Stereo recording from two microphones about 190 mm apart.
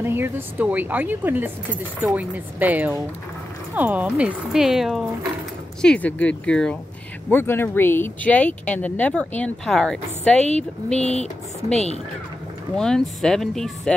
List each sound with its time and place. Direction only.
0.0 s speech: 10° right (ahead or behind); by 10.4 s 5° left (ahead or behind)
11.0 s speech: 35° left (ahead or behind)
12.7 s speech: 5° left (ahead or behind)